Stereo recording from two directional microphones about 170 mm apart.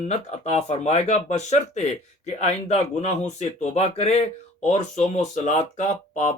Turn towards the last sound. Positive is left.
turn(degrees=45)  # may be behind; listen again after turning